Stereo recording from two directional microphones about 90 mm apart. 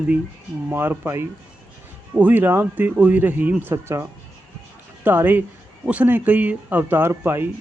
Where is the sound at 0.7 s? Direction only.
25° right (ahead or behind).